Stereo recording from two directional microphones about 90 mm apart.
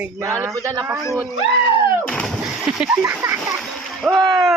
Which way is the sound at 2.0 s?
5° left (ahead or behind).